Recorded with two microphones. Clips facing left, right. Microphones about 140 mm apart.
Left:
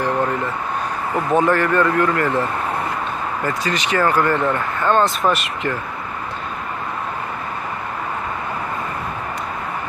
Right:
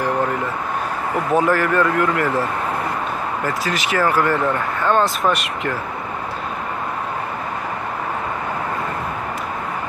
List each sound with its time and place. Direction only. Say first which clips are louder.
1.3 s speech: left 1 dB; 5° right (ahead or behind)
3.4 s speech: left 2 dB; 5° right (ahead or behind)